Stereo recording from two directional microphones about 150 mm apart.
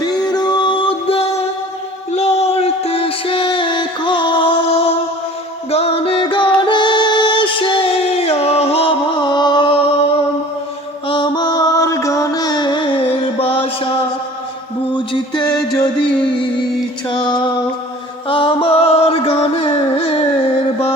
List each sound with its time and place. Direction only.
0.0 s music: 25° left (ahead or behind)
11.1 s mantra: 30° left (ahead or behind)
13.1 s music: 40° left (ahead or behind)
14.9 s music: 30° left (ahead or behind)